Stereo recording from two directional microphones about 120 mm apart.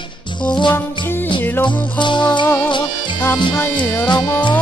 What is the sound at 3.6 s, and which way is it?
Music, 15° left (ahead or behind).